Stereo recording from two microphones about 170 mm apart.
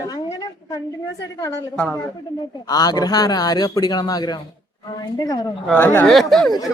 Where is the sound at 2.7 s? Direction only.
20° left (ahead or behind).